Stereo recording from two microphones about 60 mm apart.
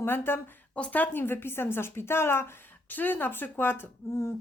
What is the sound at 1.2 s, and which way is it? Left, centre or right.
A woman's voice, left.